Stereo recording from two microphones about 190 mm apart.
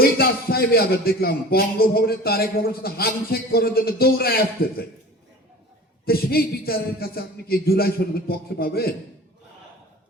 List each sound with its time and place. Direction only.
0.0 s a man's voice: 55° left (ahead or behind)
6.1 s a man's voice: 55° left (ahead or behind)